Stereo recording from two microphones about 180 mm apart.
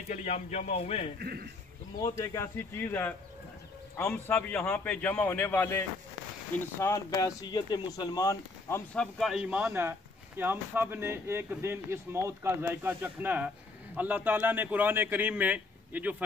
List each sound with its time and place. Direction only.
0.1 s speech: 40° left (ahead or behind)
1.2 s a man's voice: 60° right (ahead or behind)
2.0 s a man's voice: 20° left (ahead or behind); by 16.3 s 10° right (ahead or behind)